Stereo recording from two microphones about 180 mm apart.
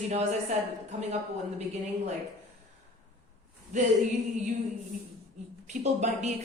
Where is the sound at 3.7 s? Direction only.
45° right (ahead or behind).